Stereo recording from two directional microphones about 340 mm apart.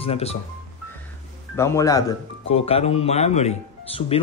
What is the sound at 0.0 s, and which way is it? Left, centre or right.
Speech, centre.